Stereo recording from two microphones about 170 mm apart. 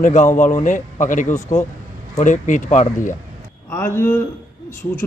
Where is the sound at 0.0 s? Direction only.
50° left (ahead or behind).